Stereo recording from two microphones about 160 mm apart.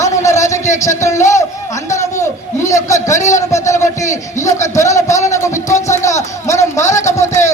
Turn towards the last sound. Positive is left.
turn(degrees=20)  # may be behind; listen again after turning